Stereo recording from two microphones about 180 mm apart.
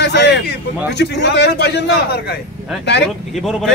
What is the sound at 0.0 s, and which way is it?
A man's voice, 70° left (ahead or behind).